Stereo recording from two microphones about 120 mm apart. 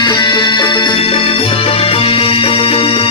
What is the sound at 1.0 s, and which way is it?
Music, 55° left (ahead or behind).